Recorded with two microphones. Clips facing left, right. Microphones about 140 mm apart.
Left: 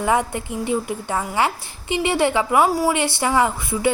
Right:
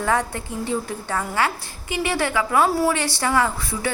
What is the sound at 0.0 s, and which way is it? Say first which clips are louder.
A woman's voice: left 2 dB; 15° left (ahead or behind).